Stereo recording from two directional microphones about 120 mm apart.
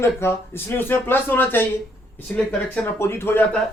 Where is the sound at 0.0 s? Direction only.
20° left (ahead or behind).